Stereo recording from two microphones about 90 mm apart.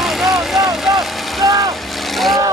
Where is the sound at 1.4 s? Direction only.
40° right (ahead or behind).